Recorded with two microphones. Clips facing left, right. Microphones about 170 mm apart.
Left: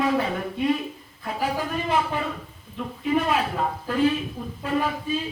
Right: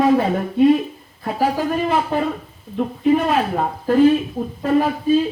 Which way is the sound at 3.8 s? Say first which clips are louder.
Right 10 dB; 45° right (ahead or behind).